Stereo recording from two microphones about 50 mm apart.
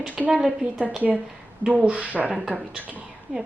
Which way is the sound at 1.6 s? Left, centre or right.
Right.